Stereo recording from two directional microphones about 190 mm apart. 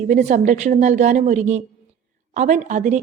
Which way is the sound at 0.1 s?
40° right (ahead or behind).